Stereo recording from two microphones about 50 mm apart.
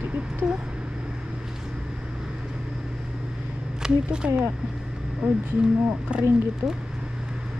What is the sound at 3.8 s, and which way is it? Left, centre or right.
Speech, centre.